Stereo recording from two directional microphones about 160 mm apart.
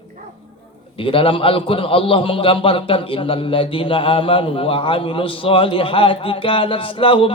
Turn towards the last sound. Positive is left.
turn(degrees=35)  # may be behind; listen again after turning